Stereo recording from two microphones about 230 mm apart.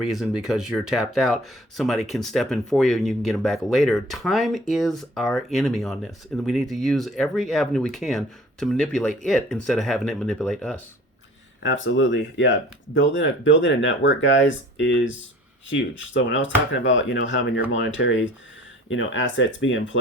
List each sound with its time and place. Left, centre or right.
0.0 s speech: centre
11.6 s speech: left